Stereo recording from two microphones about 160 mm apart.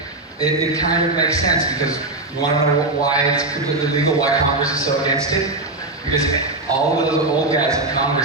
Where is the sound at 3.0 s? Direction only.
20° left (ahead or behind).